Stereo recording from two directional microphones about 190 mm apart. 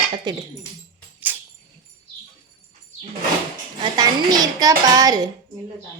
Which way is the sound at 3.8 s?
20° right (ahead or behind).